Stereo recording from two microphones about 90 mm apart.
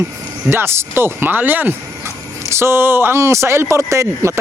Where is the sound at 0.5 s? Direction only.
30° right (ahead or behind).